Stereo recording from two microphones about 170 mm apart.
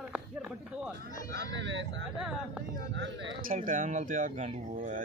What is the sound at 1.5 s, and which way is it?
Speech, 90° right.